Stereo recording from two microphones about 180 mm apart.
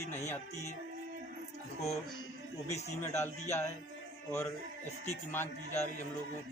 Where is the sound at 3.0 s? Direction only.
15° left (ahead or behind).